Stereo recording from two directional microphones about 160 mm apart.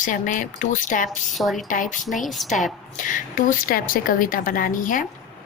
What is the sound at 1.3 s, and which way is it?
Speech, centre (ahead or behind).